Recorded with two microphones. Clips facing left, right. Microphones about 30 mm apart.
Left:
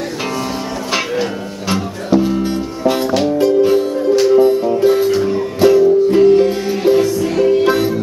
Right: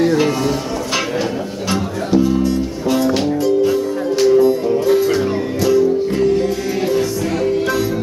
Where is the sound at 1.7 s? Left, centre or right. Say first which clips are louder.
Left 2 dB; centre.